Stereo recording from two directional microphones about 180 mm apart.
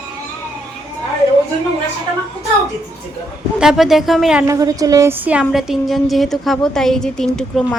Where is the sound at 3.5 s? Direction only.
5° right (ahead or behind).